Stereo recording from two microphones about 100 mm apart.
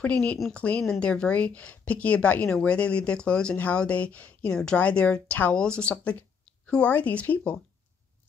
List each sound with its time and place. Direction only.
0.0 s a woman's voice: 15° left (ahead or behind)